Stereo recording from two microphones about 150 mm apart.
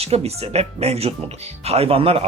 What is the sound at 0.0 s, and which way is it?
Speech, 45° right (ahead or behind).